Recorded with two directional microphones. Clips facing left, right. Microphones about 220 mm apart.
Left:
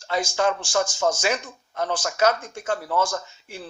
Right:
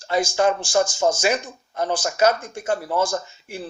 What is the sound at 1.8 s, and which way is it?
Speech, 5° right (ahead or behind).